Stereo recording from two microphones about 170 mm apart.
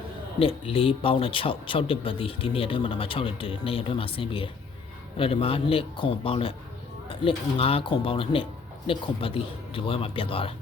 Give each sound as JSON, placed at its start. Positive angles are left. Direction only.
{"t": 0.3, "sound": "speech", "side_deg": 35}